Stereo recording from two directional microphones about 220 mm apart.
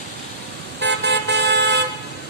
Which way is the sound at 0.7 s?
50° right (ahead or behind).